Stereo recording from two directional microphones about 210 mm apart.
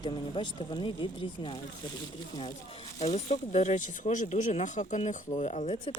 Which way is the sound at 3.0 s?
30° left (ahead or behind).